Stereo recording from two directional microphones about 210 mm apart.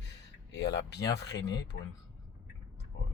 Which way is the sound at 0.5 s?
55° left (ahead or behind).